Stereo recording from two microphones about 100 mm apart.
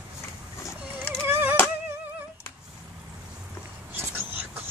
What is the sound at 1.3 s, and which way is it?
Music, 20° right (ahead or behind).